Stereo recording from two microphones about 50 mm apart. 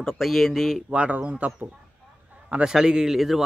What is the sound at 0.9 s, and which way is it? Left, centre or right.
Speech, right.